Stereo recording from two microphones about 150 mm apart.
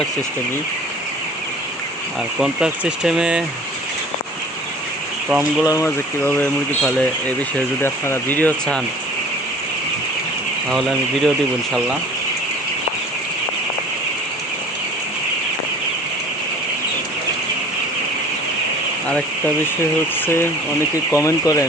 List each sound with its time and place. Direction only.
2.4 s speech: 5° right (ahead or behind)
5.3 s speech: 10° right (ahead or behind)
5.6 s speech: 20° left (ahead or behind)
10.7 s speech: 5° left (ahead or behind)
20.2 s speech: 15° left (ahead or behind)